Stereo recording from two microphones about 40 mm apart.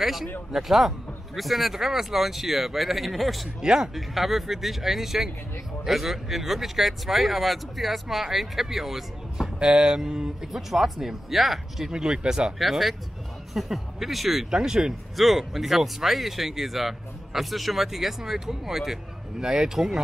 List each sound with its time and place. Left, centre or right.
0.0 s speech: centre
3.6 s speech: centre
3.9 s speech: centre
9.6 s speech: centre
11.9 s speech: centre
12.5 s speech: centre
14.5 s speech: centre
15.1 s speech: centre